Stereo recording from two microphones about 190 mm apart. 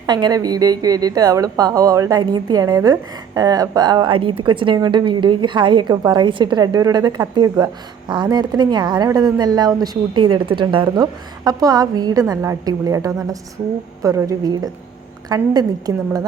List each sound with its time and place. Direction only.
0.0 s a woman's voice: 20° right (ahead or behind)